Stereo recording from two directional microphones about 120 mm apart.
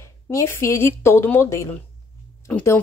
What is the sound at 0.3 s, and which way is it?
Speech, 25° left (ahead or behind).